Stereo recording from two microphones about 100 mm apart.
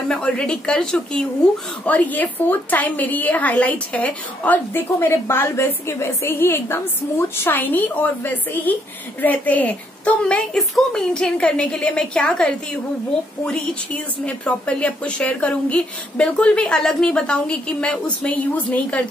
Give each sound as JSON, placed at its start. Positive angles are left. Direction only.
{"t": 0.1, "sound": "a woman's voice", "side_deg": 10}